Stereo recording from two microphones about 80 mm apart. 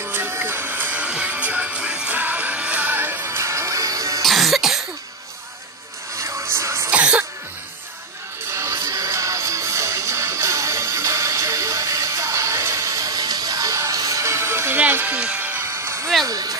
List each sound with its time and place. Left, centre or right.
0.0 s music: right
4.2 s cough: centre
6.1 s music: right
6.9 s cough: centre
8.5 s music: right
16.3 s music: right